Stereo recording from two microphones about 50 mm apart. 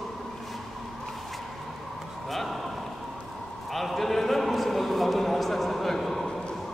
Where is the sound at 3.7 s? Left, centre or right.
Centre.